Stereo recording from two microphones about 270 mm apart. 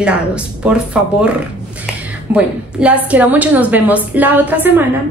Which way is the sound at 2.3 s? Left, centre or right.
Centre.